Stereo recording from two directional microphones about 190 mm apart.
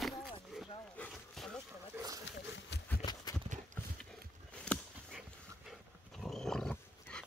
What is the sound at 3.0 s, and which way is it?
Clip-clop, 20° left (ahead or behind).